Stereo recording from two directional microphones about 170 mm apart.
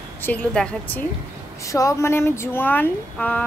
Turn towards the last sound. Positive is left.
turn(degrees=10)  # may be behind; listen again after turning